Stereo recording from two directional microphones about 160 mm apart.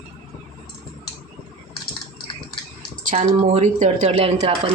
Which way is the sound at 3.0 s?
50° right (ahead or behind).